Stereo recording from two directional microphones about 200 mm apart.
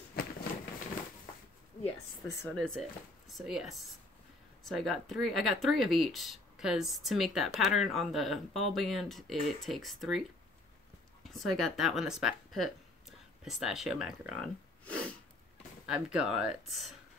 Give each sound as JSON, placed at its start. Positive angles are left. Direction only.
{"t": 0.2, "sound": "a sound", "side_deg": 50}
{"t": 2.5, "sound": "speech", "side_deg": 0}
{"t": 11.2, "sound": "speech", "side_deg": 0}